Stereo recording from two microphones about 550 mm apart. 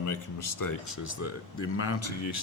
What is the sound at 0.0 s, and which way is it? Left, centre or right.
Speech, left.